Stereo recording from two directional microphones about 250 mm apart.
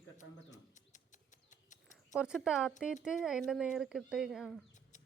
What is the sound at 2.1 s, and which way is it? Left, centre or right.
Speech, centre.